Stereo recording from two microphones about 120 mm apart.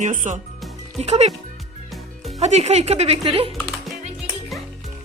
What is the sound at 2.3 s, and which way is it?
Speech, 65° right (ahead or behind).